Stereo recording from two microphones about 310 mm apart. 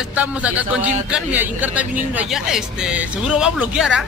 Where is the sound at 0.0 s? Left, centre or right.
Centre.